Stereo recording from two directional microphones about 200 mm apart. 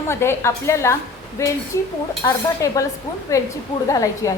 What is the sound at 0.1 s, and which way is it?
A woman's voice, 10° left (ahead or behind).